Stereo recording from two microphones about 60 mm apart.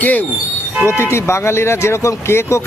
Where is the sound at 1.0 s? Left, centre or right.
Left.